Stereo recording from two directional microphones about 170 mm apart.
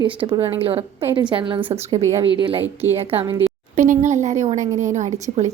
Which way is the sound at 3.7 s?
45° right (ahead or behind).